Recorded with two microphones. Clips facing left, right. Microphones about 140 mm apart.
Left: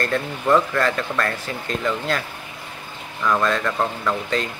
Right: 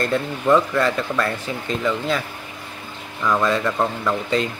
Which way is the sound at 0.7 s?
20° right (ahead or behind).